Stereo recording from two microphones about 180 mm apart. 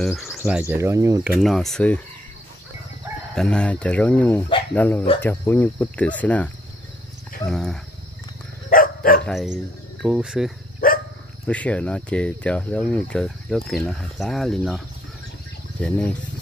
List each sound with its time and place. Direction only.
0.0 s speech: centre (ahead or behind)
1.4 s speech: centre (ahead or behind)
3.3 s cricket: 5° left (ahead or behind)
7.4 s speech: 5° left (ahead or behind)
8.6 s dog: 50° left (ahead or behind)
9.2 s speech: centre (ahead or behind)
10.8 s dog: 55° left (ahead or behind)
11.4 s speech: 10° left (ahead or behind)